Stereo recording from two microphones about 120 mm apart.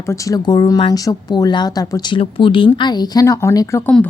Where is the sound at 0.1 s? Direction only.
30° left (ahead or behind).